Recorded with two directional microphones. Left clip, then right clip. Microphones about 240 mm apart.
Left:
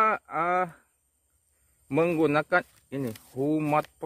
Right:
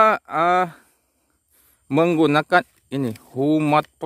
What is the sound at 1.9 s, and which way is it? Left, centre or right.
A man's voice, right.